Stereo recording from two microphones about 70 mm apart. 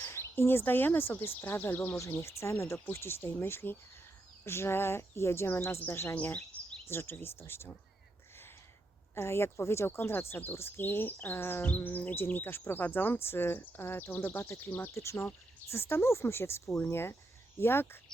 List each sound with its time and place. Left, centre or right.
0.0 s speech: left
1.9 s speech: left
9.1 s speech: left